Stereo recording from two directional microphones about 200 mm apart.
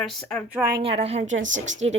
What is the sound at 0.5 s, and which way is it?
Speech, 15° right (ahead or behind).